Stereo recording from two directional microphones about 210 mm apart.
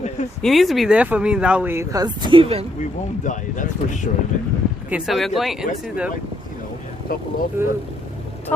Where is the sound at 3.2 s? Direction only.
40° left (ahead or behind).